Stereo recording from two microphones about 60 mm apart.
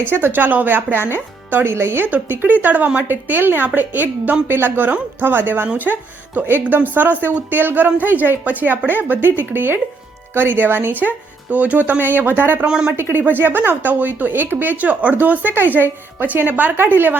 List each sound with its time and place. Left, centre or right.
0.1 s speech: right
1.6 s speech: right
2.0 s speech: right
11.5 s speech: right
12.6 s a woman's voice: centre
13.0 s speech: right